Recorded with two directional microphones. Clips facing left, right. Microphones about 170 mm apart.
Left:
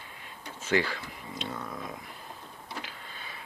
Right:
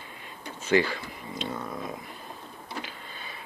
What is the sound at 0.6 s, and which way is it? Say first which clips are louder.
Speech: right 4 dB; centre (ahead or behind).